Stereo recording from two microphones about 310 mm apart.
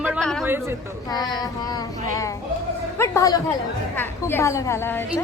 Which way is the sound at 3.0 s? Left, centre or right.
Centre.